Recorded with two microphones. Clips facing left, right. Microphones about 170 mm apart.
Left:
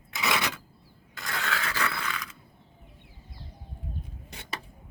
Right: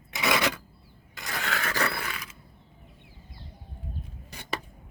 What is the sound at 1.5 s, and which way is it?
Scrape, 45° right (ahead or behind).